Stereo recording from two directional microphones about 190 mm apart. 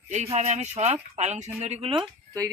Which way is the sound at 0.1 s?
35° right (ahead or behind).